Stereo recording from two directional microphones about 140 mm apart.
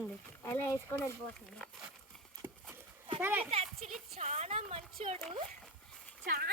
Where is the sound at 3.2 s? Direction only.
15° right (ahead or behind).